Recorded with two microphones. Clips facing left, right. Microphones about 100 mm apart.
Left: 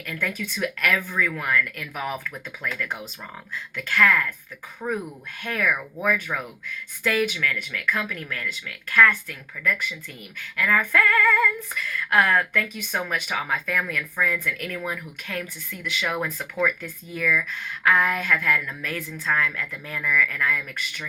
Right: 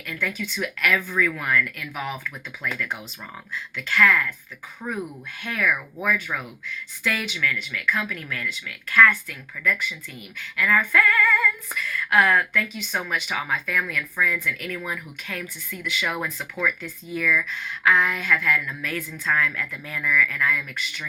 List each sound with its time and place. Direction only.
0.0 s female singing: 45° left (ahead or behind)
1.2 s a woman's voice: 35° left (ahead or behind)
1.6 s female singing: 45° left (ahead or behind)
5.4 s female singing: 45° left (ahead or behind)
6.3 s a woman's voice: 45° left (ahead or behind)
10.3 s female singing: 40° left (ahead or behind)
14.8 s a woman's voice: 35° left (ahead or behind)